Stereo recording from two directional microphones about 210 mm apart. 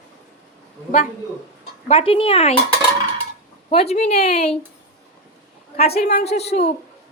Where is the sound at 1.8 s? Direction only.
25° left (ahead or behind).